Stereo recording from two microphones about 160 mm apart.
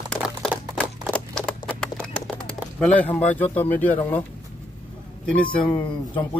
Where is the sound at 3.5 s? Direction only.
10° left (ahead or behind).